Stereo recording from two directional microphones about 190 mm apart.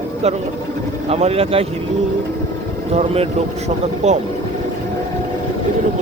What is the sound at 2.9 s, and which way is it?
Speech, 35° right (ahead or behind).